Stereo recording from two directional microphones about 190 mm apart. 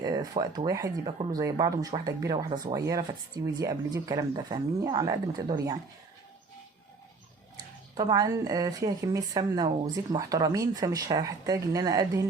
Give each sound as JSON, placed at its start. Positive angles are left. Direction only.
{"t": 0.0, "sound": "speech", "side_deg": -20}
{"t": 7.5, "sound": "speech", "side_deg": -20}